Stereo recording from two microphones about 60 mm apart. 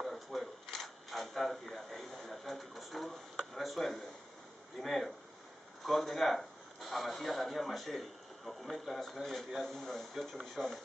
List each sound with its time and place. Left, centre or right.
0.0 s camera: centre
3.5 s a sound: centre
5.9 s speech: centre